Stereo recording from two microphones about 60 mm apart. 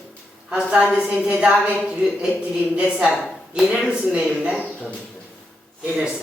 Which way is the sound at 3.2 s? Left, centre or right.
Centre.